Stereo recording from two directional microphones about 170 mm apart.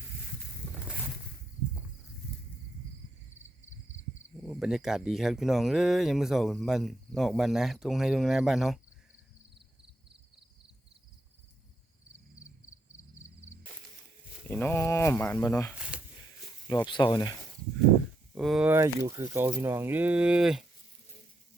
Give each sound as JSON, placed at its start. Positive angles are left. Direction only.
{"t": 4.4, "sound": "speech", "side_deg": 0}
{"t": 9.6, "sound": "a sound", "side_deg": -30}
{"t": 14.4, "sound": "speech", "side_deg": 10}
{"t": 15.9, "sound": "a sound", "side_deg": -5}
{"t": 16.8, "sound": "speech", "side_deg": 25}
{"t": 18.3, "sound": "speech", "side_deg": 0}
{"t": 18.7, "sound": "speech", "side_deg": -15}